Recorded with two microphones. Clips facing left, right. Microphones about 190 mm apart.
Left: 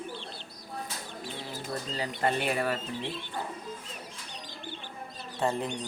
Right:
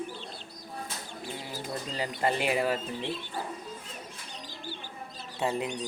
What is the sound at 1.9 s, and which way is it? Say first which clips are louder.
Speech: even; 10° right (ahead or behind).